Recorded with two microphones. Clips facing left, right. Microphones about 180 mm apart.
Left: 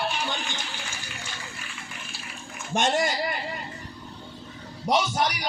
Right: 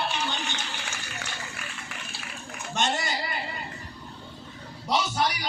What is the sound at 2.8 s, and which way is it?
Speech, 50° left (ahead or behind).